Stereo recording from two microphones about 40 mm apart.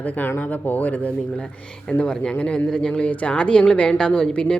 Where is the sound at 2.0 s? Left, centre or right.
Left.